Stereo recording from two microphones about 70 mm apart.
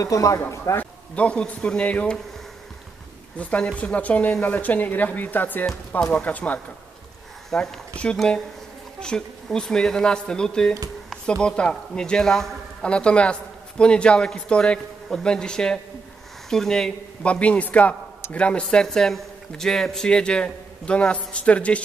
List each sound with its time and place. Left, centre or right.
0.0 s speech: left
0.7 s speech: centre
3.3 s speech: centre
7.5 s a man's voice: centre
12.9 s speech: centre
17.2 s speech: centre